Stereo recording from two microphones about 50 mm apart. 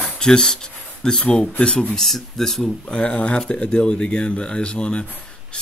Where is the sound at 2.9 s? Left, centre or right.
Centre.